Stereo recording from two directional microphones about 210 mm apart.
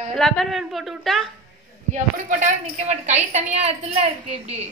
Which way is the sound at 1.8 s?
35° right (ahead or behind).